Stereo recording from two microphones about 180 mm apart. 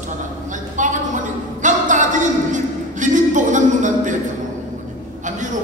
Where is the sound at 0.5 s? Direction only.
45° right (ahead or behind).